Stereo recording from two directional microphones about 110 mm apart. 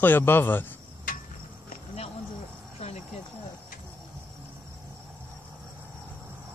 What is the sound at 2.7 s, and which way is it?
Cricket, 90° left.